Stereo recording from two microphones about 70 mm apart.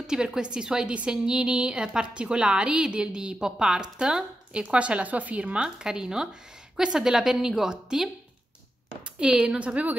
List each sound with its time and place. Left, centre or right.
0.0 s a woman's voice: centre
9.2 s a woman's voice: centre